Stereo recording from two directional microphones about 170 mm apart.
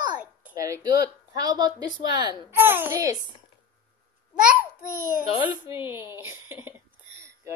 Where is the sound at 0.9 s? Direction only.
65° left (ahead or behind).